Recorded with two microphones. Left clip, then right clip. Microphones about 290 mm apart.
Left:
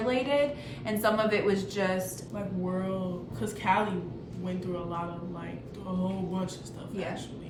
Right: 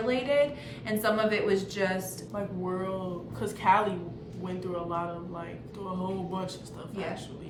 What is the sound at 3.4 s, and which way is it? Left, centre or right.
Speech, centre.